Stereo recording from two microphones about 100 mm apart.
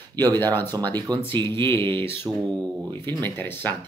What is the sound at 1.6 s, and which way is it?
Speech, 25° left (ahead or behind).